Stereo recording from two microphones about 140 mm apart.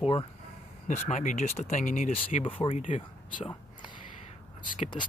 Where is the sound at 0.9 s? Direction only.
65° left (ahead or behind).